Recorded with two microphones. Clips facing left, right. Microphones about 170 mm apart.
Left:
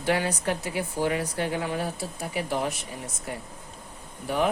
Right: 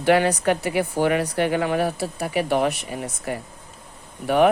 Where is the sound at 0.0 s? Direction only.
70° right (ahead or behind).